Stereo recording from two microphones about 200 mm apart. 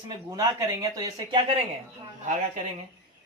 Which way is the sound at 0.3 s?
15° right (ahead or behind).